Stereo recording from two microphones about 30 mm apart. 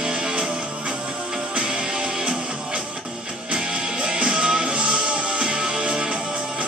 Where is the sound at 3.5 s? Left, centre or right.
Right.